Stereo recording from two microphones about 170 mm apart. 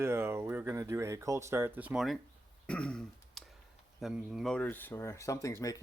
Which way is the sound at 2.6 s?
5° left (ahead or behind).